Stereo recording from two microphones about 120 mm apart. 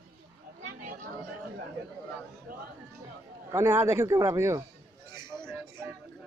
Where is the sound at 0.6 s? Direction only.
90° right.